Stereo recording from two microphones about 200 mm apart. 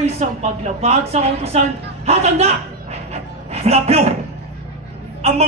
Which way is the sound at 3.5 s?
30° right (ahead or behind).